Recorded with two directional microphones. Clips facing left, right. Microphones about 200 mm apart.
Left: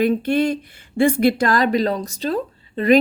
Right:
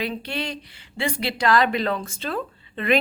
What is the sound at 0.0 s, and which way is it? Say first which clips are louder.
Speech: left 11 dB; 50° left (ahead or behind).